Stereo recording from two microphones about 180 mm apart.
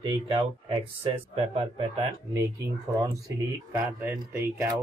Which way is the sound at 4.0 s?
15° right (ahead or behind).